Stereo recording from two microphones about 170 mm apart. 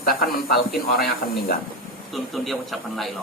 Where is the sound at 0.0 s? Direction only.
60° left (ahead or behind).